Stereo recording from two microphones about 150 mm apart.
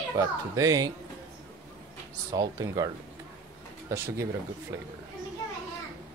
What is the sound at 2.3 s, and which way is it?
Speech, 25° right (ahead or behind).